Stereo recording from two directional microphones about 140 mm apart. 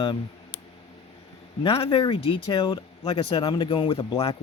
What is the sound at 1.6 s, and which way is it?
Speech, 40° left (ahead or behind).